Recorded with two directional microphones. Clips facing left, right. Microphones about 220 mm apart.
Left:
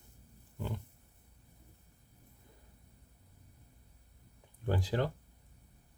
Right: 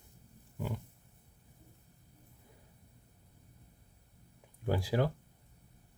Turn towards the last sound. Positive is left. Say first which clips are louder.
# right 2 dB
turn(degrees=-10)  # may be behind; listen again after turning